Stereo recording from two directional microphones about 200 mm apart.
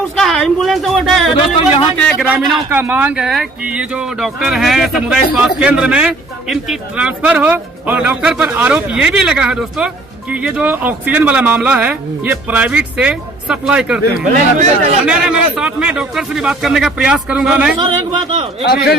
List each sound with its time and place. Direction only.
0.2 s speech: centre (ahead or behind)
2.2 s speech: 10° right (ahead or behind)
14.3 s speech: 40° right (ahead or behind)
15.0 s speech: 5° right (ahead or behind)
18.6 s a man's voice: 55° left (ahead or behind)